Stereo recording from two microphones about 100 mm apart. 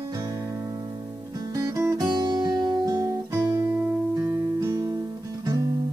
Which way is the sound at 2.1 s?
40° right (ahead or behind).